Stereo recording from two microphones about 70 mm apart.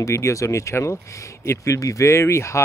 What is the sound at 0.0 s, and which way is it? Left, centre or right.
Speech, left.